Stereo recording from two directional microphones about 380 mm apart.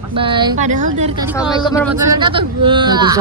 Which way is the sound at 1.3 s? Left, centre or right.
Centre.